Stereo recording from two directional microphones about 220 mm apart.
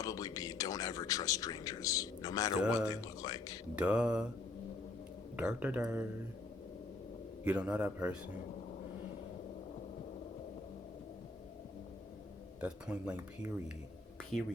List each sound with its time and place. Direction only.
0.0 s speech: 15° left (ahead or behind)
2.6 s speech: 5° right (ahead or behind)
2.9 s speech: 15° left (ahead or behind)
3.8 s speech: 5° right (ahead or behind)
5.4 s speech: 5° right (ahead or behind)
7.4 s speech: 5° right (ahead or behind)
12.5 s speech: 5° right (ahead or behind)